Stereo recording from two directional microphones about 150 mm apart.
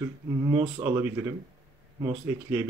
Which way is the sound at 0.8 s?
10° right (ahead or behind).